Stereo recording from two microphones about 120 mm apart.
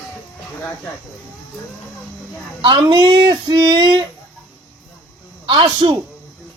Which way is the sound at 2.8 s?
40° right (ahead or behind).